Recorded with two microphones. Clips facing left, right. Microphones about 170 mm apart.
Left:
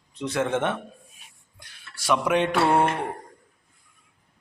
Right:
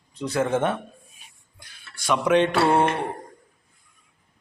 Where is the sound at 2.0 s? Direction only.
5° left (ahead or behind).